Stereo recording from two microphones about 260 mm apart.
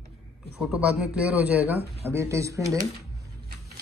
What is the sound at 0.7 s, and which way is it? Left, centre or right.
Speech, centre.